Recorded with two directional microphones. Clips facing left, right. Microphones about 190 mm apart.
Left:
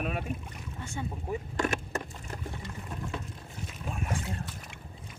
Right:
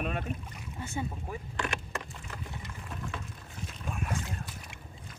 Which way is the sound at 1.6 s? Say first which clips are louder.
Left 4 dB; 45° left (ahead or behind).